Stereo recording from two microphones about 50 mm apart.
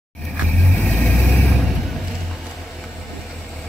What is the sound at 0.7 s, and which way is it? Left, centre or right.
Vehicle, left.